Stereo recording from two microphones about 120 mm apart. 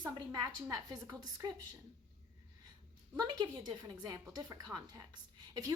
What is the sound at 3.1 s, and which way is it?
A woman's voice, 35° right (ahead or behind).